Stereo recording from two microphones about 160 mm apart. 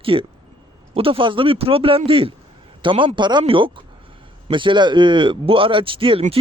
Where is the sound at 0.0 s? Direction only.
35° right (ahead or behind).